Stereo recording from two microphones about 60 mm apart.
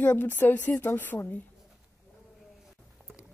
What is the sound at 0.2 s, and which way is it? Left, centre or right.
A woman's voice, left.